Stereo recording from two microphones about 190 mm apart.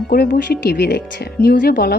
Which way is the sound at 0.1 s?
60° left (ahead or behind).